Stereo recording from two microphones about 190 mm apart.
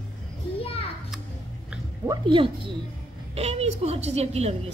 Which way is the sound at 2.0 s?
25° right (ahead or behind).